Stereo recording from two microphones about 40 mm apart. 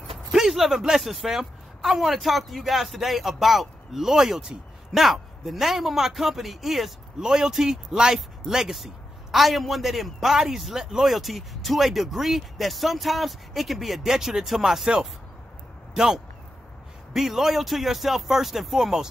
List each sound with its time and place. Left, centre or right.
0.3 s a sound: centre
1.0 s speech: centre
5.0 s speech: centre
7.2 s speech: centre
15.9 s speech: centre